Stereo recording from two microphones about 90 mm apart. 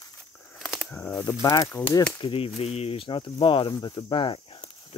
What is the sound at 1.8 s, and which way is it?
Speech, 40° left (ahead or behind).